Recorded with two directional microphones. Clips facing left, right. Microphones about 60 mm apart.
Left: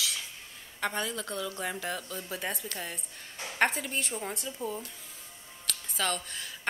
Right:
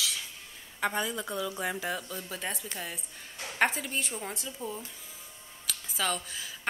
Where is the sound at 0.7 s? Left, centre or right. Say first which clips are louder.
Right 2 dB; centre.